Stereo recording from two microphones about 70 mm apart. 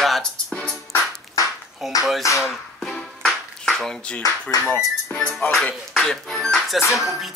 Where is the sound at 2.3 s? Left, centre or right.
Left.